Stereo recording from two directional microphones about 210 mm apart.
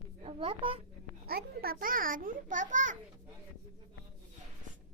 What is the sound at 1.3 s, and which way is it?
A child's voice, 45° right (ahead or behind).